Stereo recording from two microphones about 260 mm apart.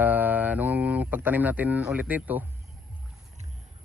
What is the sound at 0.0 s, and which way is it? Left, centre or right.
Mantra, centre.